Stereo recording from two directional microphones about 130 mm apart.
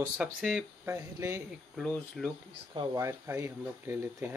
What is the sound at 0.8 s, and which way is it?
Speech, 20° right (ahead or behind).